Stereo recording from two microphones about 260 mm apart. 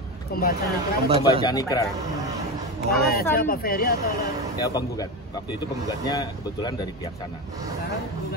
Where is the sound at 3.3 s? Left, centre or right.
Left.